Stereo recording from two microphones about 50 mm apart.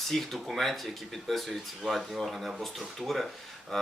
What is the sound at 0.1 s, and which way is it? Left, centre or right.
Speech, centre.